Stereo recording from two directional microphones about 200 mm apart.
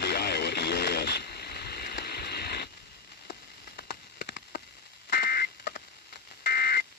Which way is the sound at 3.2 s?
55° left (ahead or behind).